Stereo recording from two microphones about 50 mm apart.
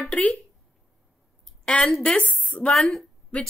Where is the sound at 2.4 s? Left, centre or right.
Left.